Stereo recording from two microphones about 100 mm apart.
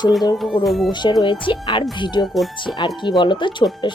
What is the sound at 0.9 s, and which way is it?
Speech, 50° left (ahead or behind).